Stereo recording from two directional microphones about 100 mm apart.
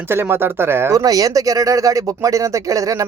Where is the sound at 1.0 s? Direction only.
35° right (ahead or behind).